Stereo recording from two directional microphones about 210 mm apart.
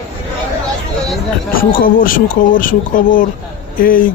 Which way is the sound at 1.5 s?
45° left (ahead or behind).